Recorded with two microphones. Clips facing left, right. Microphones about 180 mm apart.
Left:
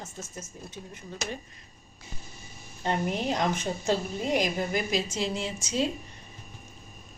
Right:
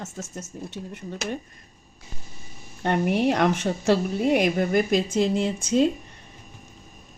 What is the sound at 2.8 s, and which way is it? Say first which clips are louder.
Speech: right 6 dB; 65° right (ahead or behind).